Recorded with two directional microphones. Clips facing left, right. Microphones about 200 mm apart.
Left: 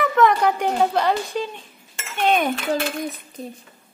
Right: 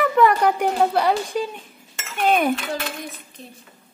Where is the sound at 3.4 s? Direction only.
40° left (ahead or behind).